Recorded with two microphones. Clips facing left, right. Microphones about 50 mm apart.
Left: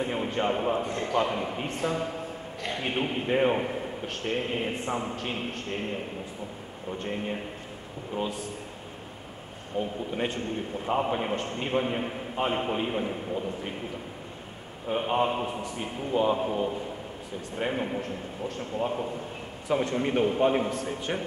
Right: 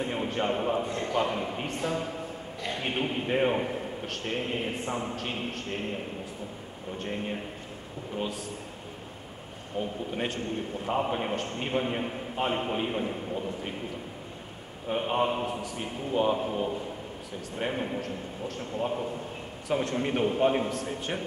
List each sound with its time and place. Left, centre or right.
0.0 s a man's voice: centre
10.1 s a man's voice: centre
14.9 s a man's voice: centre